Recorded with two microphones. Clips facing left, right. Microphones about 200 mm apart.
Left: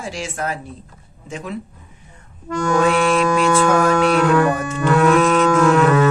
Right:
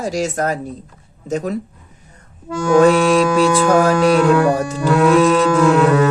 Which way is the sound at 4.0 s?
10° right (ahead or behind).